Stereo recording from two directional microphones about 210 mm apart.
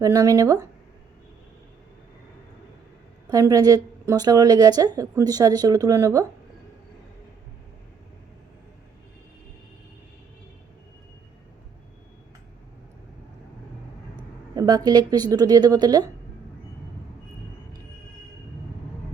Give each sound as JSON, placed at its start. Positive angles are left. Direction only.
{"t": 0.0, "sound": "a woman's voice", "side_deg": -15}
{"t": 3.2, "sound": "a woman's voice", "side_deg": -15}
{"t": 14.2, "sound": "a woman's voice", "side_deg": -20}